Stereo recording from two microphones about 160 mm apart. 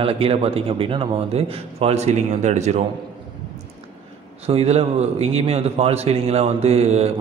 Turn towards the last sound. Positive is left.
turn(degrees=-40)  # may be behind; listen again after turning